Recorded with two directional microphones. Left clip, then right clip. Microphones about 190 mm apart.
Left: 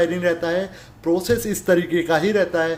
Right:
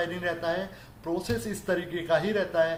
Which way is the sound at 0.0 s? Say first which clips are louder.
Left 10 dB; 40° left (ahead or behind).